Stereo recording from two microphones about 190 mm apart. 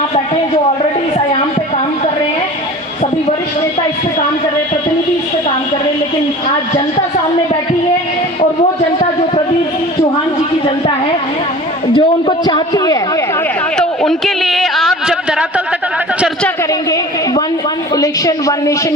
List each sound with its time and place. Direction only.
11.9 s a man's voice: 25° left (ahead or behind)
13.7 s a sound: centre (ahead or behind)
17.9 s a woman's voice: 20° left (ahead or behind)